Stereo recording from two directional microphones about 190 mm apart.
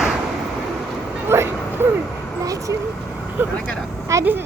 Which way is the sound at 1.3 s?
10° right (ahead or behind).